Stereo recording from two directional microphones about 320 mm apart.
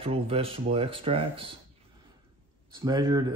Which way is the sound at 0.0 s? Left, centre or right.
Centre.